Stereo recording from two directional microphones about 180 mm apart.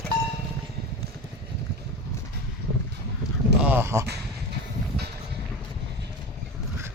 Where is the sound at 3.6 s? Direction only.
10° right (ahead or behind).